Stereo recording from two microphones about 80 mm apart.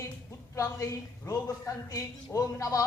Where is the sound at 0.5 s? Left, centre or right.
Left.